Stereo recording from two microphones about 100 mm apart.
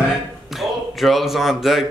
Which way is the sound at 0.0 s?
Centre (ahead or behind).